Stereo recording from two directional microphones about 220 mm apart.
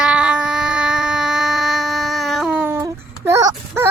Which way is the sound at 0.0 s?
5° right (ahead or behind).